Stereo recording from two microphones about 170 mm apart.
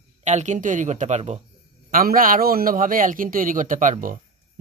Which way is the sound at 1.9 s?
55° right (ahead or behind).